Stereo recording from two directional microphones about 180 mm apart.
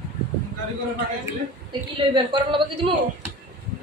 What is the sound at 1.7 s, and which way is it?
A woman's voice, 25° right (ahead or behind).